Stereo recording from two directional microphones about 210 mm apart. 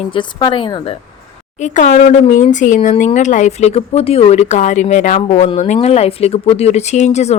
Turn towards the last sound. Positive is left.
turn(degrees=30)  # may be behind; listen again after turning